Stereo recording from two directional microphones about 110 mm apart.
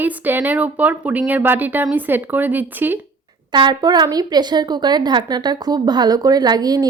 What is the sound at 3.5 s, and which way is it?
A woman's voice, 40° right (ahead or behind).